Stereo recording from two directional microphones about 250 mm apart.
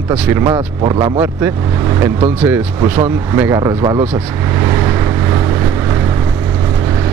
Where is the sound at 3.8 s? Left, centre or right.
Right.